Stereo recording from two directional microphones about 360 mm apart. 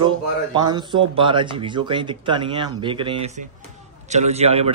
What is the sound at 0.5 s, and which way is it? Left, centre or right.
Speech, centre.